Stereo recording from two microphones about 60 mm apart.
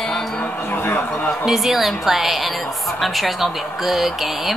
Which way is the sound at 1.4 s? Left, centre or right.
Centre.